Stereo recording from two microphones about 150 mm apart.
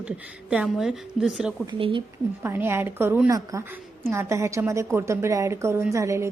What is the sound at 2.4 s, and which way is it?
A woman's voice, 15° right (ahead or behind).